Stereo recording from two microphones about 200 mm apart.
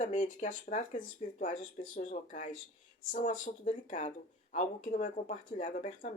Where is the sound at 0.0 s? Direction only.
40° left (ahead or behind).